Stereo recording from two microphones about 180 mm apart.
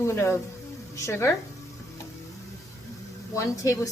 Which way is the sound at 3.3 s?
15° left (ahead or behind).